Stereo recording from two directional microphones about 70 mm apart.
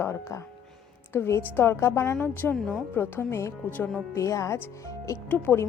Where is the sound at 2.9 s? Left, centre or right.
Left.